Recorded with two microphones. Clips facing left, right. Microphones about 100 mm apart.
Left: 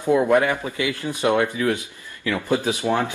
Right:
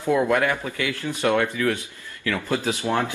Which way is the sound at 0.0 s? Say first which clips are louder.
Left 3 dB; 20° left (ahead or behind).